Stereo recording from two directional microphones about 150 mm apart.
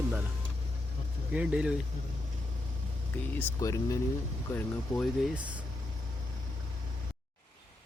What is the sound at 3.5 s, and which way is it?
Speech, 20° left (ahead or behind).